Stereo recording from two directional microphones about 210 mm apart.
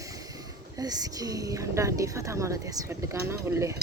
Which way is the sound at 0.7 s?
20° right (ahead or behind).